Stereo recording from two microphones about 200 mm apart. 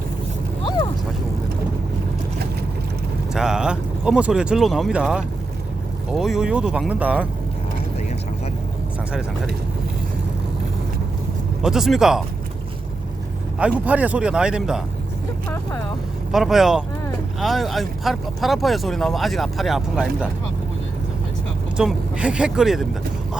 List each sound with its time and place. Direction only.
3.3 s speech: 5° right (ahead or behind)
11.6 s speech: centre (ahead or behind)
13.6 s speech: 5° right (ahead or behind)
16.3 s speech: centre (ahead or behind)
21.8 s speech: 5° right (ahead or behind)